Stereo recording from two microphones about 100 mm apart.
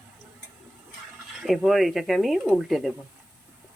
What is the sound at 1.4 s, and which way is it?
Speech, centre (ahead or behind).